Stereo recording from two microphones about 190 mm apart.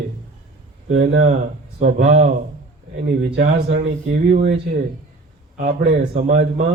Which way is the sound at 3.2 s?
60° right (ahead or behind).